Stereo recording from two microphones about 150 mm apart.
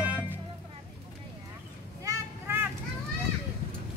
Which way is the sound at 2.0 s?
15° right (ahead or behind).